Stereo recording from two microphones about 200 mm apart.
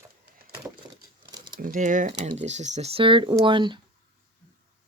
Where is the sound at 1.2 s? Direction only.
20° right (ahead or behind).